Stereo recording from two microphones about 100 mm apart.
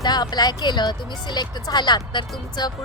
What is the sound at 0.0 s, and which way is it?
Speech, 45° left (ahead or behind).